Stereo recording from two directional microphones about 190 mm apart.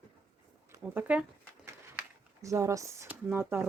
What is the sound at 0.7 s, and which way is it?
Speech, 10° right (ahead or behind).